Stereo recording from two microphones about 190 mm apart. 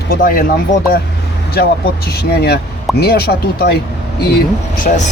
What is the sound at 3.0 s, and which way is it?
Speech, 55° left (ahead or behind).